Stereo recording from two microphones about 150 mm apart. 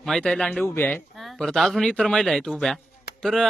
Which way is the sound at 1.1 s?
Centre (ahead or behind).